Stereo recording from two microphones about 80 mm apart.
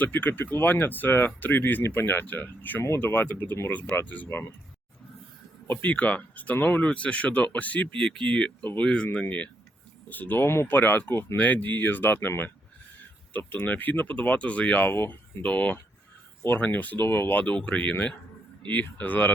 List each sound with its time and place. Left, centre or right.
0.0 s speech: left
5.6 s speech: left
10.1 s speech: left
11.3 s speech: centre
13.3 s speech: left
14.8 s speech: left
17.5 s speech: centre